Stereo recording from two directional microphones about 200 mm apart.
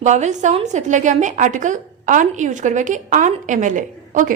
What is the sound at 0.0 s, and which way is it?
A woman's voice, 35° right (ahead or behind).